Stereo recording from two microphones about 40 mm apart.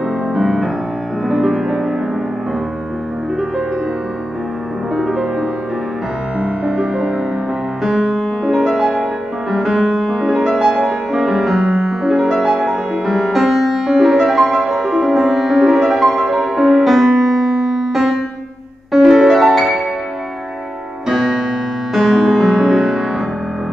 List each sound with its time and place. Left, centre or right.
0.3 s music: centre
4.9 s music: centre
6.4 s music: centre
21.1 s music: centre